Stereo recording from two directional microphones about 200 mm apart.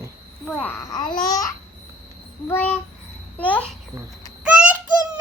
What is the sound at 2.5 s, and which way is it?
A child's voice, 10° left (ahead or behind).